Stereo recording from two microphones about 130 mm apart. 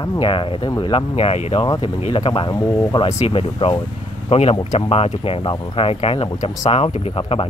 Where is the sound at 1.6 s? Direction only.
40° left (ahead or behind).